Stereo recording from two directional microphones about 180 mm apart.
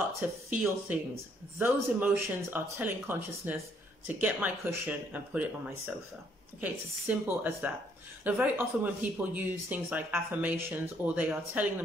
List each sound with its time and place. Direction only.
0.2 s speech: 10° right (ahead or behind)